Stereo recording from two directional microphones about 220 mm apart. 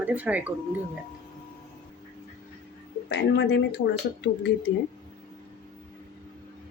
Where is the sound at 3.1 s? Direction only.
50° left (ahead or behind).